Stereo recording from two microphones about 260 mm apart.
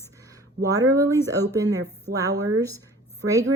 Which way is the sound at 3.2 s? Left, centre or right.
Right.